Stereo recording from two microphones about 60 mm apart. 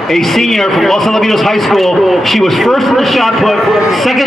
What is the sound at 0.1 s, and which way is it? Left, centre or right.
A man's voice, centre.